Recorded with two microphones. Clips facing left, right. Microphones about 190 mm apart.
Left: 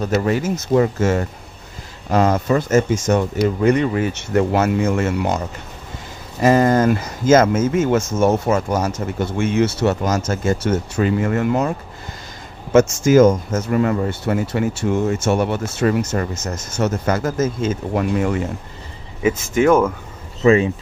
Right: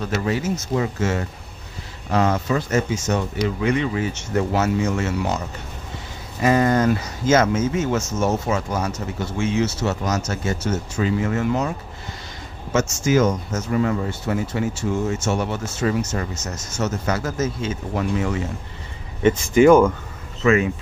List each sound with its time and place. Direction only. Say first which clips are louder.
0.0 s speech: left 4 dB; 45° left (ahead or behind)
6.4 s speech: left 3 dB; 45° left (ahead or behind)
13.0 s speech: left 6 dB; 50° left (ahead or behind)
19.2 s speech: right 2 dB; centre (ahead or behind)
20.4 s speech: left 4 dB; 30° left (ahead or behind)